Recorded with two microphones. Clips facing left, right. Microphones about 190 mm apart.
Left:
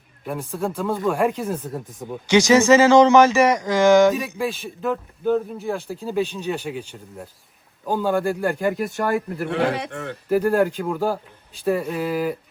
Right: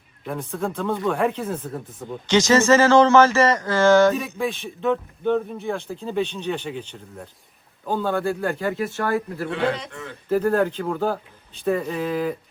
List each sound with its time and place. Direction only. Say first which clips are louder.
0.3 s speech: left 1 dB; 5° left (ahead or behind)
9.5 s a man's voice: left 2 dB; 65° left (ahead or behind)
10.2 s speech: left 1 dB; 10° left (ahead or behind)